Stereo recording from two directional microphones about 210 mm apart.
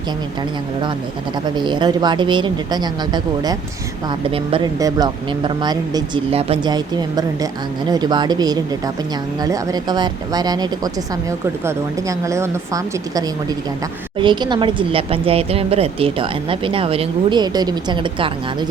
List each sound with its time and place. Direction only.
1.5 s speech: 20° right (ahead or behind)